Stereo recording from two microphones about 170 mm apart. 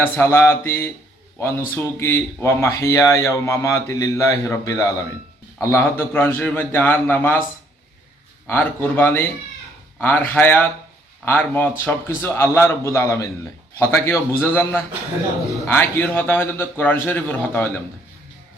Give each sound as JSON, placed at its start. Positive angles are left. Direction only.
{"t": 0.0, "sound": "speech", "side_deg": 15}
{"t": 8.4, "sound": "speech", "side_deg": 10}